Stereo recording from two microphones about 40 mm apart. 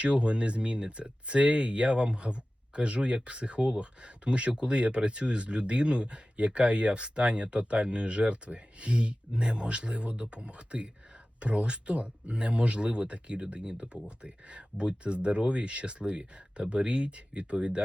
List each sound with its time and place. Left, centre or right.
0.0 s speech: right